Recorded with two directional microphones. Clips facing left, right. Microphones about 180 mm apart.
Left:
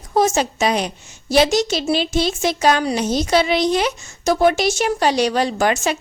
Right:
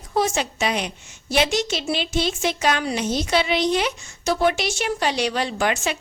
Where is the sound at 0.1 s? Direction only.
45° left (ahead or behind).